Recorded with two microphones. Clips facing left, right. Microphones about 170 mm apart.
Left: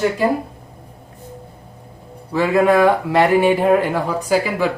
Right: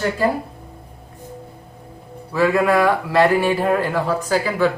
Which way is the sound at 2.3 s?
20° left (ahead or behind).